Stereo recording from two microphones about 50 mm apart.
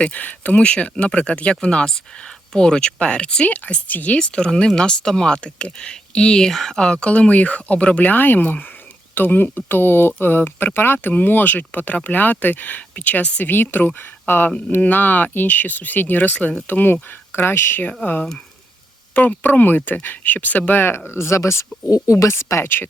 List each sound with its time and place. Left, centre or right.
0.0 s speech: left
4.2 s speech: centre
6.7 s speech: centre
13.4 s speech: left
19.1 s speech: left
21.1 s speech: left
22.0 s speech: left